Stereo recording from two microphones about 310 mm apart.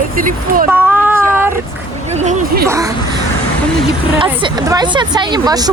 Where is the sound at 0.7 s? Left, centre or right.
Centre.